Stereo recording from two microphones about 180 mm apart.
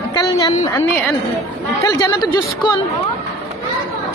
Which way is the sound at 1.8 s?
20° left (ahead or behind).